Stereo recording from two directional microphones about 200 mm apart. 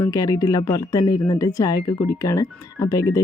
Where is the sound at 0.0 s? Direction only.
20° left (ahead or behind).